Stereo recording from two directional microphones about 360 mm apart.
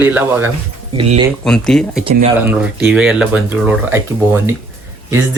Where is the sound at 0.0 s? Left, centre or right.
Centre.